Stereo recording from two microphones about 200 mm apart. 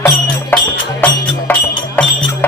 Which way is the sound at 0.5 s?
10° left (ahead or behind).